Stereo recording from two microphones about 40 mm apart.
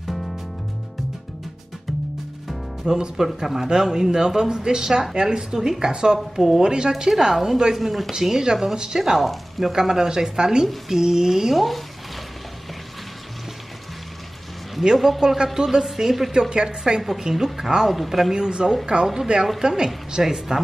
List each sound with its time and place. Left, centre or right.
2.8 s speech: centre
14.8 s speech: centre
18.3 s a woman's voice: centre
20.1 s speech: centre